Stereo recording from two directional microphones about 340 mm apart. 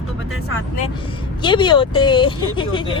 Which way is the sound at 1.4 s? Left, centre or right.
Centre.